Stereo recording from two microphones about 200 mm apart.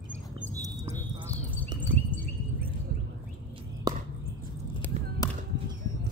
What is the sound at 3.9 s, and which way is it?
Chop, 20° right (ahead or behind).